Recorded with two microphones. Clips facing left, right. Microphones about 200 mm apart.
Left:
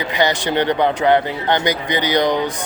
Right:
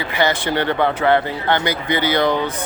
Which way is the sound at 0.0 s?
15° left (ahead or behind).